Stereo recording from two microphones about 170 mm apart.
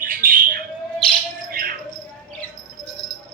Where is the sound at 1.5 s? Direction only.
60° right (ahead or behind).